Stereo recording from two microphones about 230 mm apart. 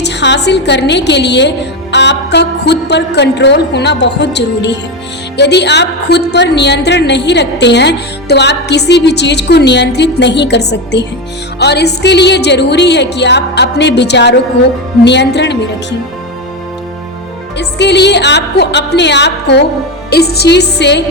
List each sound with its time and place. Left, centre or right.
0.0 s a woman's voice: left
17.6 s a woman's voice: left